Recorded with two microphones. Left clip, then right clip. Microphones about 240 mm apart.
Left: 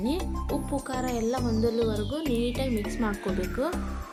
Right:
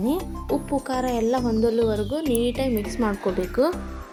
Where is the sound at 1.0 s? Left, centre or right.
Centre.